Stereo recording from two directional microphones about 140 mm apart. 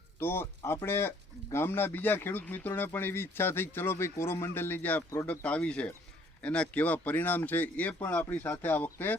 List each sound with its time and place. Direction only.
0.2 s speech: 15° left (ahead or behind)